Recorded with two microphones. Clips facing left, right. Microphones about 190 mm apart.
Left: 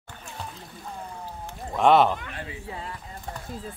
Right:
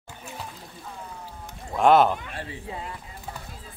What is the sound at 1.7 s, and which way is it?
Speech, centre (ahead or behind).